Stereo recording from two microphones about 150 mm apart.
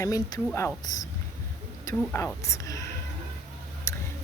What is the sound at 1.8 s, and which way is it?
Speech, 20° left (ahead or behind).